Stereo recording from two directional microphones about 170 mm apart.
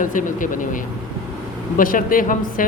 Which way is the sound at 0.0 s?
50° left (ahead or behind).